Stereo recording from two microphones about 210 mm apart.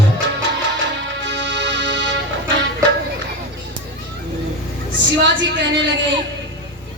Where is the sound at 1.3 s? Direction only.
55° right (ahead or behind).